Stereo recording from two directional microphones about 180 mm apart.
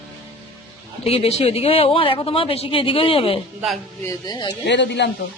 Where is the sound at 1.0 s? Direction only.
35° left (ahead or behind).